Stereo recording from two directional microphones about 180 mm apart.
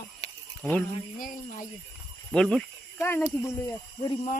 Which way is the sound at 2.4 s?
5° left (ahead or behind).